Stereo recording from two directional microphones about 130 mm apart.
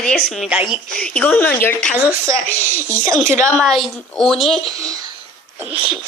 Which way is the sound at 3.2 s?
70° left (ahead or behind).